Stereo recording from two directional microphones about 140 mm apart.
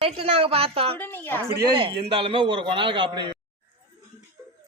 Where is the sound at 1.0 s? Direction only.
15° left (ahead or behind).